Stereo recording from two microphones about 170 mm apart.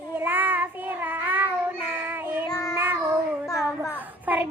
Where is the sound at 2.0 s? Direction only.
10° right (ahead or behind).